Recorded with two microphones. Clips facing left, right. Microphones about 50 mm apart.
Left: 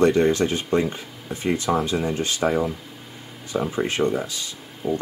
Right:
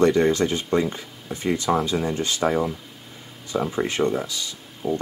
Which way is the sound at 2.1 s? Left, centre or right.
Left.